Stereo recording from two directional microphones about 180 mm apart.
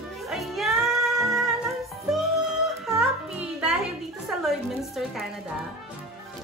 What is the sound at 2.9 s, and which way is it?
Music, 5° right (ahead or behind).